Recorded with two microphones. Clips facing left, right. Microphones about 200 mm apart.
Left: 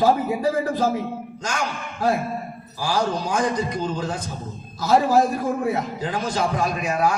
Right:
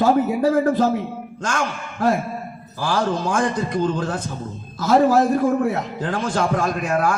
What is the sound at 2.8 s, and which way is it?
A man's voice, 50° right (ahead or behind).